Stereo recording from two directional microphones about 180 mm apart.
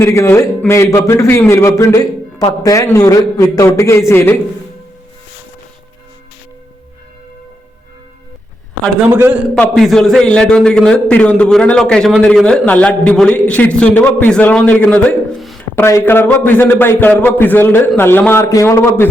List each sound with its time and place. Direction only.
0.0 s a man's voice: 15° left (ahead or behind)
9.0 s a man's voice: 10° right (ahead or behind)
9.6 s a man's voice: centre (ahead or behind)
15.7 s a man's voice: 15° left (ahead or behind)